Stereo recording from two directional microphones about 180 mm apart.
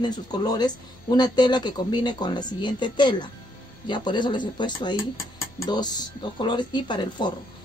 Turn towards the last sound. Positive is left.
turn(degrees=25)  # may be behind; listen again after turning